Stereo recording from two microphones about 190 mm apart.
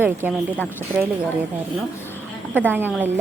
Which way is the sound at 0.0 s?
10° right (ahead or behind).